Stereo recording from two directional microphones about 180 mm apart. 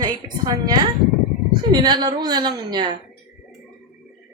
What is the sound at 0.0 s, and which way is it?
A woman's voice, 20° right (ahead or behind).